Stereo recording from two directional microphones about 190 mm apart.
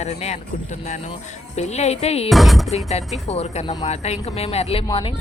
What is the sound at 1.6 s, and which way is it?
Speech, 35° left (ahead or behind).